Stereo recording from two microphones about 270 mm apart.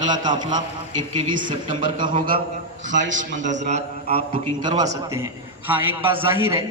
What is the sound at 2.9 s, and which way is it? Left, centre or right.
Speech, right.